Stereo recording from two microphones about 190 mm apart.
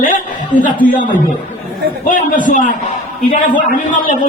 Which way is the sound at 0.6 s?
45° left (ahead or behind).